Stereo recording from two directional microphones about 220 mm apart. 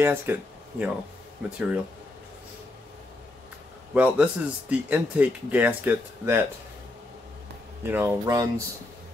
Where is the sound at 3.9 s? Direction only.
5° right (ahead or behind).